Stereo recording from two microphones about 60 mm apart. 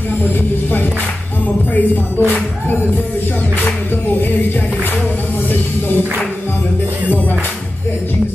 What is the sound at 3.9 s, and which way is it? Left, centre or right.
Speech, left.